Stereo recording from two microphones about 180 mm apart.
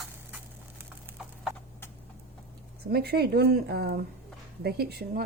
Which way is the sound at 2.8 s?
60° right (ahead or behind).